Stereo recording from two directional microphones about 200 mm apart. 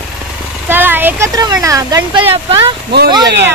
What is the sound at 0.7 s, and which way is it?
Speech, 10° right (ahead or behind).